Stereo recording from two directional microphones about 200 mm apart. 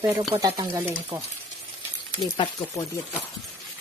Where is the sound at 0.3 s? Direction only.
20° right (ahead or behind).